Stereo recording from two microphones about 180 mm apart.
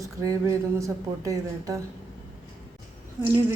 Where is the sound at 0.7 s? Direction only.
20° right (ahead or behind).